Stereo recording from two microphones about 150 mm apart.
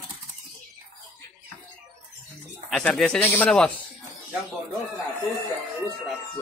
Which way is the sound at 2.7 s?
5° left (ahead or behind).